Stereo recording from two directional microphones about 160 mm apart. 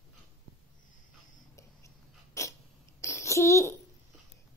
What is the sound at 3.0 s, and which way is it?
Babbling, 20° left (ahead or behind).